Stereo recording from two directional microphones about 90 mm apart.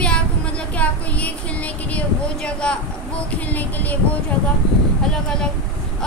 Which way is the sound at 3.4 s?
20° left (ahead or behind).